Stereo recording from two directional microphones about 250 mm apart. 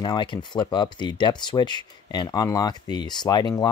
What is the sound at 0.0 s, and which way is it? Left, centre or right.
Speech, centre.